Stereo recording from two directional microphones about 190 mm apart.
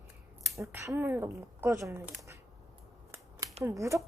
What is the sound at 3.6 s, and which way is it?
Speech, 15° right (ahead or behind).